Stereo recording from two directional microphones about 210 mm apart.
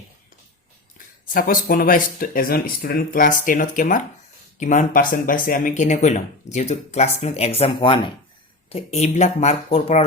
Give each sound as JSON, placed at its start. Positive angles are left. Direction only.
{"t": 0.9, "sound": "speech", "side_deg": 40}